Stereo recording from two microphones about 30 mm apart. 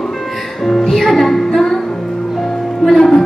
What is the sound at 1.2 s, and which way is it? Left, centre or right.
Music, centre.